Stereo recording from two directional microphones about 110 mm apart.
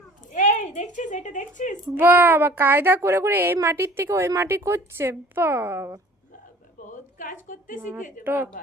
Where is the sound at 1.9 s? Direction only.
20° right (ahead or behind).